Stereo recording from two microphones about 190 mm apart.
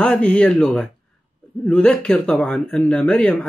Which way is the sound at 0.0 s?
5° left (ahead or behind).